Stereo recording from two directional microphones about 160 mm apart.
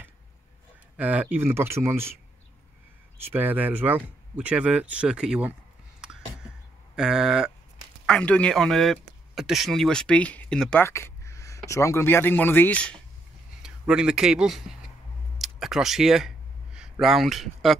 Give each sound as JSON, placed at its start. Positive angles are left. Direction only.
{"t": 0.9, "sound": "speech", "side_deg": -10}
{"t": 3.3, "sound": "speech", "side_deg": -10}
{"t": 5.9, "sound": "a sound", "side_deg": -5}
{"t": 7.0, "sound": "speech", "side_deg": -5}
{"t": 8.1, "sound": "speech", "side_deg": 5}
{"t": 13.6, "sound": "speech", "side_deg": -5}
{"t": 15.3, "sound": "a sound", "side_deg": 0}
{"t": 17.0, "sound": "speech", "side_deg": 0}